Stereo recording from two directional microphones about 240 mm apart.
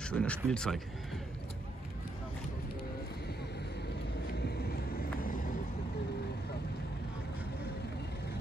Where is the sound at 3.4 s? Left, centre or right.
Left.